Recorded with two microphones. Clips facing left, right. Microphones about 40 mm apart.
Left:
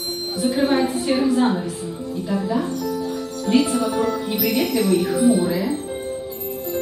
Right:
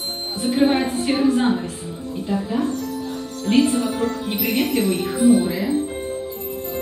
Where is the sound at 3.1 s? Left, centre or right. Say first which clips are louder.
Right 2 dB; right.